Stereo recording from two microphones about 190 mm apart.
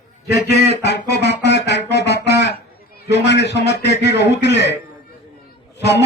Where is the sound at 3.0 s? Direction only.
65° left (ahead or behind).